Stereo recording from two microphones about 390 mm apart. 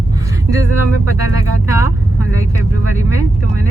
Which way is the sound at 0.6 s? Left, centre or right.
Left.